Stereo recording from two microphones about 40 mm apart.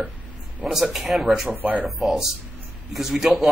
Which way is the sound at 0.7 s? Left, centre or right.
Centre.